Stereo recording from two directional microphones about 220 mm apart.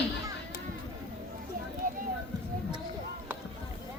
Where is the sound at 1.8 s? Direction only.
40° right (ahead or behind).